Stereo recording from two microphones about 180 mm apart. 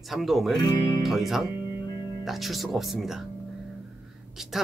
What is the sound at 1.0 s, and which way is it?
Speech, centre (ahead or behind).